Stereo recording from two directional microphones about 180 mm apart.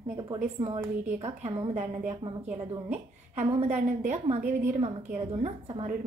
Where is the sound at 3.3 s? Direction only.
45° right (ahead or behind).